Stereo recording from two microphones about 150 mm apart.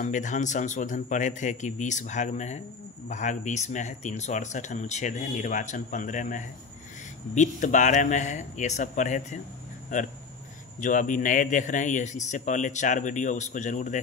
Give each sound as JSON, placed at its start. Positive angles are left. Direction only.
{"t": 0.0, "sound": "a man's voice", "side_deg": 55}